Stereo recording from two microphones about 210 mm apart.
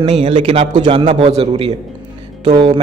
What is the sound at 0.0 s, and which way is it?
A man's voice, 25° right (ahead or behind).